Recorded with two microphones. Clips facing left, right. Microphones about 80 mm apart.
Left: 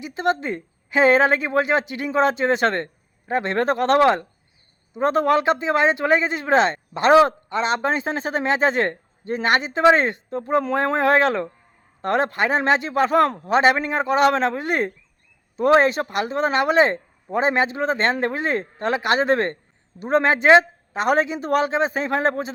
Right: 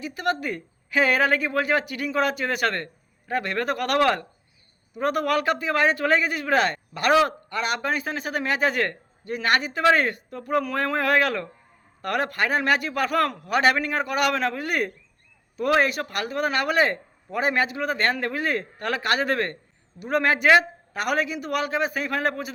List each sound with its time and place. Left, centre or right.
0.0 s speech: left